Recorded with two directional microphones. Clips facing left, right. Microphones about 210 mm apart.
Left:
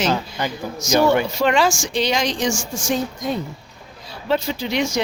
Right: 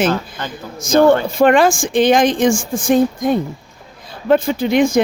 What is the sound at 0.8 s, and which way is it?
Speech, 55° right (ahead or behind).